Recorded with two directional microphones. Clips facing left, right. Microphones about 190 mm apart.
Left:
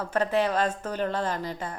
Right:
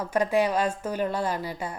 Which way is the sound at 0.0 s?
10° right (ahead or behind).